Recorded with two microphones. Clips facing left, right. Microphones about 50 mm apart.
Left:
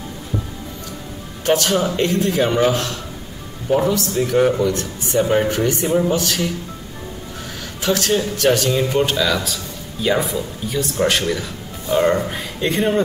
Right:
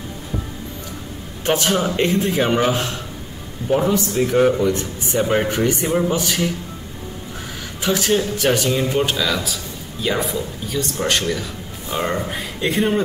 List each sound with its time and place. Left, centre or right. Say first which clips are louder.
1.4 s a man's voice: left 1 dB; centre
3.6 s speech: even; centre
7.8 s speech: even; centre